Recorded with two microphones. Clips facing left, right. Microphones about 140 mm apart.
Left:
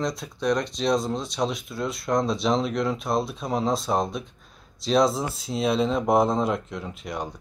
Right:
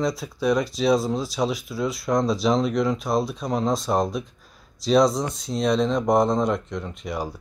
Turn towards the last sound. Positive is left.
turn(degrees=0)  # may be behind; listen again after turning